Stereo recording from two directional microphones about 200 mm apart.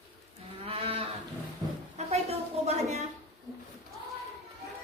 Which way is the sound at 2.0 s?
35° right (ahead or behind).